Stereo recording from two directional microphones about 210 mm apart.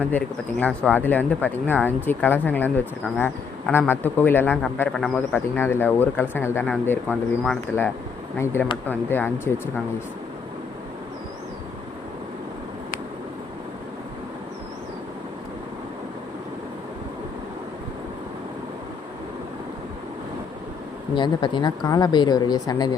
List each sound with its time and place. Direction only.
0.0 s speech: 5° left (ahead or behind)
21.2 s speech: 20° left (ahead or behind)